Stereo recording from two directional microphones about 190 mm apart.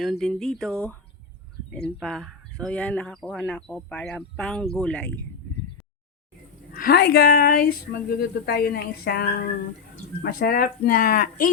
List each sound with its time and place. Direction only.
0.0 s speech: centre (ahead or behind)
2.0 s speech: centre (ahead or behind)
6.7 s speech: 55° left (ahead or behind)
10.2 s speech: 50° left (ahead or behind)